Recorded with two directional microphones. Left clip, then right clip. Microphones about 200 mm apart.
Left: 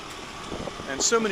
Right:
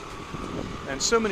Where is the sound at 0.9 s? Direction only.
10° right (ahead or behind).